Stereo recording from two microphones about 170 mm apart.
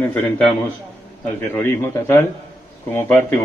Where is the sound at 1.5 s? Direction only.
15° left (ahead or behind).